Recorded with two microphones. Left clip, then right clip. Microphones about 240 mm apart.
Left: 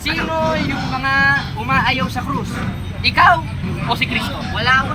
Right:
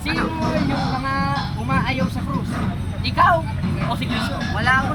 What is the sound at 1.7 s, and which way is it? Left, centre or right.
Speech, centre.